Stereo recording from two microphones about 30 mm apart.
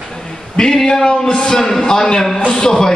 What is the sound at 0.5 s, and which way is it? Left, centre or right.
A man's voice, left.